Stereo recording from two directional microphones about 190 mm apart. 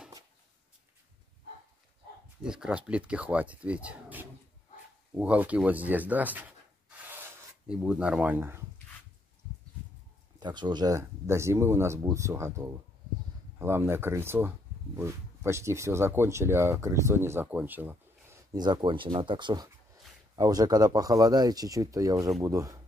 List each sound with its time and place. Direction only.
2.4 s speech: 5° right (ahead or behind)
7.1 s rub: 10° right (ahead or behind)
10.4 s speech: 25° right (ahead or behind)